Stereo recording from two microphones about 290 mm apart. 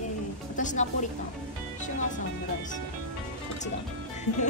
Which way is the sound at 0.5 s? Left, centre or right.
Left.